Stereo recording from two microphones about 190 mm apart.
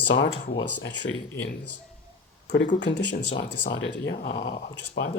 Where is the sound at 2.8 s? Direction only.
70° left (ahead or behind).